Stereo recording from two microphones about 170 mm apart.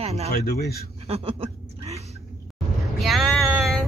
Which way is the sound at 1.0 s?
35° right (ahead or behind).